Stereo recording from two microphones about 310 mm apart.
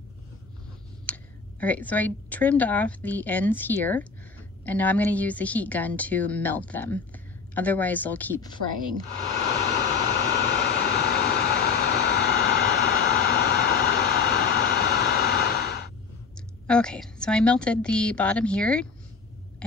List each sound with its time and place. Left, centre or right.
1.0 s a woman's voice: centre
9.3 s vehicle: left
16.6 s a woman's voice: centre